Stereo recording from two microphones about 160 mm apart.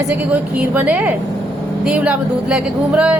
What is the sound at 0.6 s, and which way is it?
A woman's voice, 10° right (ahead or behind).